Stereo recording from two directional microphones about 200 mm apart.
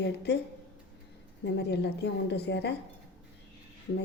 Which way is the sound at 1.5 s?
55° left (ahead or behind).